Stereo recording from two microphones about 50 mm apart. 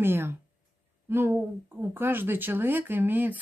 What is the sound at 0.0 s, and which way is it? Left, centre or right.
A woman's voice, right.